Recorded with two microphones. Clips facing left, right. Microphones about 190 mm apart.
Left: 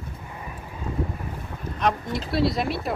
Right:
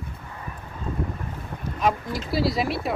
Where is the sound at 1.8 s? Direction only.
Centre (ahead or behind).